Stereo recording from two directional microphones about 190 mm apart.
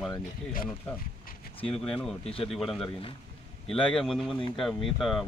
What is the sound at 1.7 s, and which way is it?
Speech, 5° left (ahead or behind).